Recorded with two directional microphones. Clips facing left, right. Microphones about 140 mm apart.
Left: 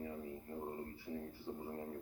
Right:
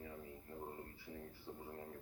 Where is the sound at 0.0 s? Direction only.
25° left (ahead or behind).